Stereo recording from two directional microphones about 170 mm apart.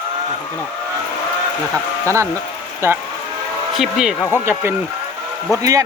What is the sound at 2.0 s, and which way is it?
Speech, 15° right (ahead or behind).